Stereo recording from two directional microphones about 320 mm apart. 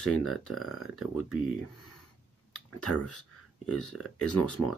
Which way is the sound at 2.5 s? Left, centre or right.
Left.